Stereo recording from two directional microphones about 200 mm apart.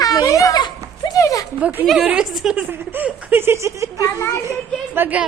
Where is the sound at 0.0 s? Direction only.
20° left (ahead or behind).